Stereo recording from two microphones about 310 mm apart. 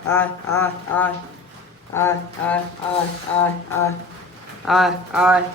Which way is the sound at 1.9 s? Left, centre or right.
Centre.